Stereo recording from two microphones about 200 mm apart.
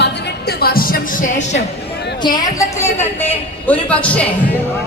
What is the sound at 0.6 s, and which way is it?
Speech, 45° left (ahead or behind).